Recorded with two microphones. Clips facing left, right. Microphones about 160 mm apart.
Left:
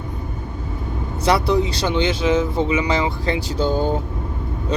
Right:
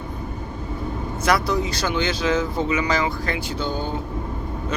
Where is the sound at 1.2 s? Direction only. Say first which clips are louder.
Left 4 dB; 30° left (ahead or behind).